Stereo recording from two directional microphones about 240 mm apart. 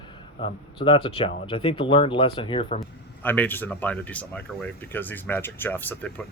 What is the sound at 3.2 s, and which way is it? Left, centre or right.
Speech, centre.